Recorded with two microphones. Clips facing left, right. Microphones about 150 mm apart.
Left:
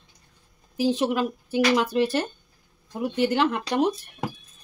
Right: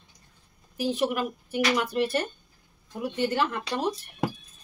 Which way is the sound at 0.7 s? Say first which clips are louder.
Left 4 dB; 90° left.